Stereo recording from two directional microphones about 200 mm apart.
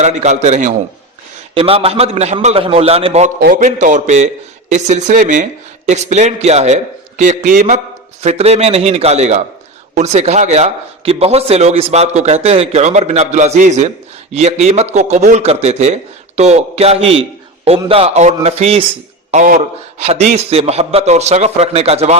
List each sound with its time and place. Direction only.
0.0 s a man's voice: 35° right (ahead or behind)